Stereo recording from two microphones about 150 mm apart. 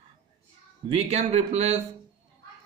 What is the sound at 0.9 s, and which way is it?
Speech, 45° right (ahead or behind).